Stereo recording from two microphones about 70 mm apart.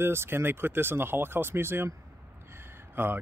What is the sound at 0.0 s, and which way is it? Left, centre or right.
Speech, right.